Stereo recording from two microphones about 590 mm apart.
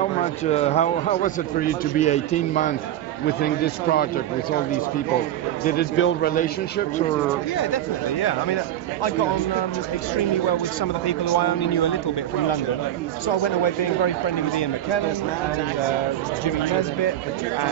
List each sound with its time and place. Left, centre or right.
0.2 s a man's voice: centre
5.7 s a man's voice: centre
7.5 s speech: left
11.1 s speech: left
13.3 s speech: left